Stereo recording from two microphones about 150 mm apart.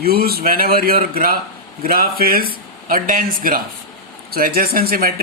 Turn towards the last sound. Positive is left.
turn(degrees=-75)  # may be behind; listen again after turning